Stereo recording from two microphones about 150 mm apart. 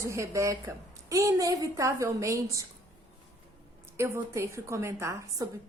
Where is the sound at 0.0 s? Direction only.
20° right (ahead or behind).